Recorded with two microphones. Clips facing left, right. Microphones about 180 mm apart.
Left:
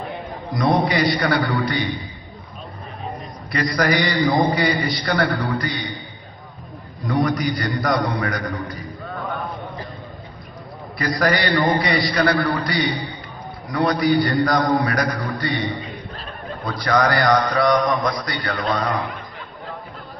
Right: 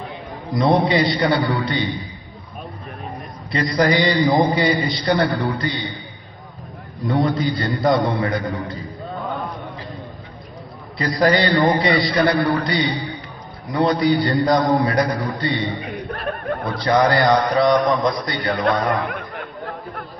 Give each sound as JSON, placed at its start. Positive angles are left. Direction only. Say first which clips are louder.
{"t": 0.6, "sound": "a man's voice", "louder": "right 2 dB", "side_deg": -25}
{"t": 3.5, "sound": "a man's voice", "louder": "right 2 dB", "side_deg": -20}
{"t": 7.2, "sound": "a man's voice", "louder": "right 1 dB", "side_deg": -25}
{"t": 11.0, "sound": "a man's voice", "louder": "right 3 dB", "side_deg": -20}
{"t": 15.8, "sound": "chuckle", "louder": "right 6 dB", "side_deg": -65}
{"t": 16.6, "sound": "a man's voice", "louder": "right 2 dB", "side_deg": -25}
{"t": 18.9, "sound": "a sound", "louder": "right 3 dB", "side_deg": -60}